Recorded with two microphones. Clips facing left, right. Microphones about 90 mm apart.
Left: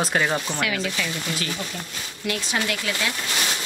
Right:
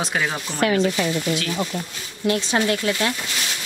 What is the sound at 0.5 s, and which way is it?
Speech, 35° right (ahead or behind).